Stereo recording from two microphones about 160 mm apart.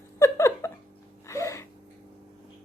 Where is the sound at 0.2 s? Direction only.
20° left (ahead or behind).